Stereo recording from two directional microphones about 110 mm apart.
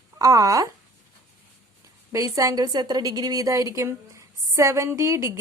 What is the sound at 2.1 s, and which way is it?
A woman's voice, 30° right (ahead or behind).